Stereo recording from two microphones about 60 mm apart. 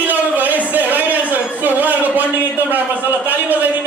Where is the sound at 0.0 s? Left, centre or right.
Right.